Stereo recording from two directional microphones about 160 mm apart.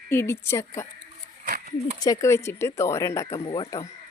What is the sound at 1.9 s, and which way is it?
A child's voice, 25° left (ahead or behind).